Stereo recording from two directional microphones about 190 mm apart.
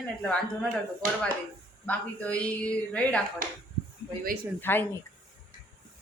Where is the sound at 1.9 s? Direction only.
5° left (ahead or behind).